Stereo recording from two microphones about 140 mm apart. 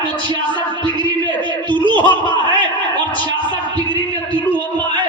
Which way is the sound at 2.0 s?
35° right (ahead or behind).